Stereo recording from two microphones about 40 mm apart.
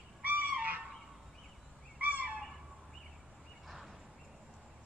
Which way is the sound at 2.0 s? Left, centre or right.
Right.